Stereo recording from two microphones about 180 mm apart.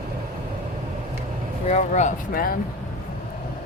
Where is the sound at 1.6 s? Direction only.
40° left (ahead or behind).